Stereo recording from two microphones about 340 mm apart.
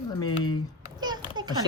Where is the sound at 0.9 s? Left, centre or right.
Centre.